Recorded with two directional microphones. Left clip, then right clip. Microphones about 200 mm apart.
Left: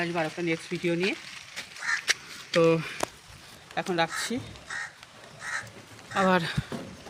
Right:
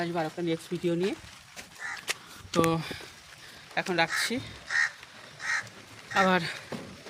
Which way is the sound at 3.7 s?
5° right (ahead or behind).